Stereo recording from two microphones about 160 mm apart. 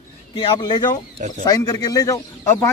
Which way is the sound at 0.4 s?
30° left (ahead or behind).